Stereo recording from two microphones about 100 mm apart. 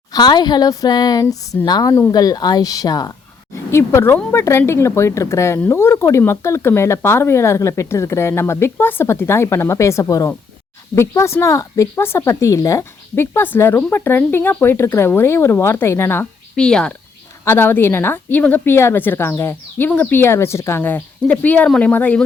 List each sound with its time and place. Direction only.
0.1 s a woman's voice: 45° left (ahead or behind)
3.5 s speech: 25° left (ahead or behind)
16.6 s speech: 10° left (ahead or behind)
17.4 s speech: 25° left (ahead or behind)